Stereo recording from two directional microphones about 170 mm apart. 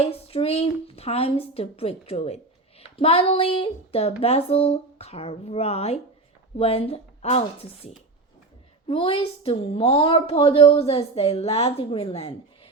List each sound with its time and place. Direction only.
0.0 s speech: 35° left (ahead or behind)
8.9 s speech: 30° left (ahead or behind)